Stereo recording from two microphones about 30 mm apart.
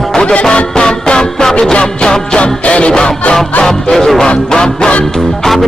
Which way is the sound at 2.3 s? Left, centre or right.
Left.